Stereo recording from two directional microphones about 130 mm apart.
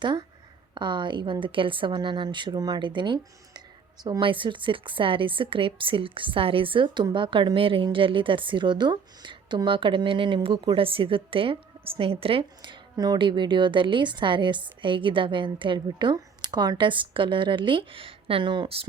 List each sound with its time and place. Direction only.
0.0 s a woman's voice: 35° right (ahead or behind)